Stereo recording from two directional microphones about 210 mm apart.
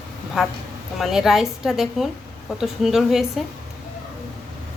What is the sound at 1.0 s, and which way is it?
Speech, centre (ahead or behind).